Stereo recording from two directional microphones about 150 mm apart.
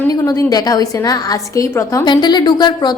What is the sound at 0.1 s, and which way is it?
A woman's voice, 25° left (ahead or behind).